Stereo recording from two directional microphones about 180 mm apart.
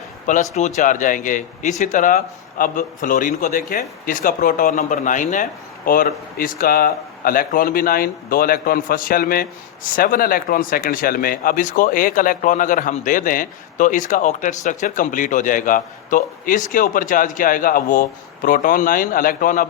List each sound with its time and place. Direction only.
0.3 s speech: 40° left (ahead or behind)